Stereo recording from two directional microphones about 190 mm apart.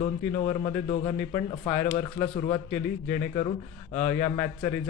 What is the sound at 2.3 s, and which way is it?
Speech, 30° left (ahead or behind).